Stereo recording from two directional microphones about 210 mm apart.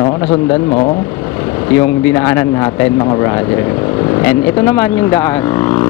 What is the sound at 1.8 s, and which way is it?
Speech, 15° left (ahead or behind).